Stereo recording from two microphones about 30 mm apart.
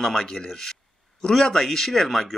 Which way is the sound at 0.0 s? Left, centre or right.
Centre.